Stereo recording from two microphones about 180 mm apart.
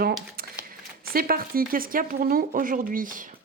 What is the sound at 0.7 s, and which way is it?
Speech, 55° right (ahead or behind).